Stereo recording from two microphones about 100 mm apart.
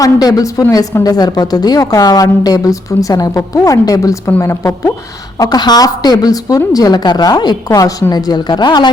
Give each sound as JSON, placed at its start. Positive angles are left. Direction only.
{"t": 0.0, "sound": "a woman's voice", "side_deg": 40}
{"t": 5.4, "sound": "a woman's voice", "side_deg": 40}